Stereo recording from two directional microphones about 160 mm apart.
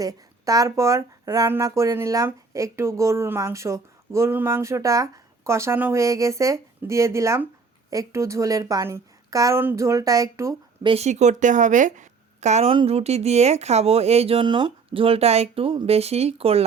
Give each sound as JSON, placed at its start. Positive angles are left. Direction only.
{"t": 0.0, "sound": "speech", "side_deg": -20}
{"t": 10.8, "sound": "speech", "side_deg": -40}